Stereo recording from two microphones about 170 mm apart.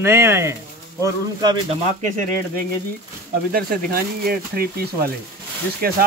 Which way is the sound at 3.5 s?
60° right (ahead or behind).